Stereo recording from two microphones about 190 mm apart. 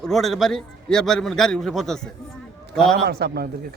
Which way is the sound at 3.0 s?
55° right (ahead or behind).